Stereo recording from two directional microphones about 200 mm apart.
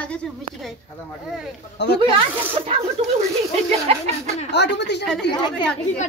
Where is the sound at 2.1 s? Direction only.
25° right (ahead or behind).